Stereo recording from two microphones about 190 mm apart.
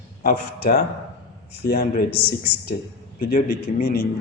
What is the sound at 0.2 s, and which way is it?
A man's voice, 50° left (ahead or behind).